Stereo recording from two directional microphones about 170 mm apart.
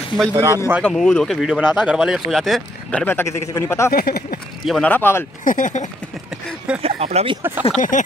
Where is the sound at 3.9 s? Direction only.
60° left (ahead or behind).